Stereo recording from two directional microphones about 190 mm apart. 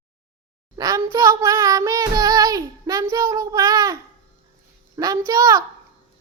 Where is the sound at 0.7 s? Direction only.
20° right (ahead or behind).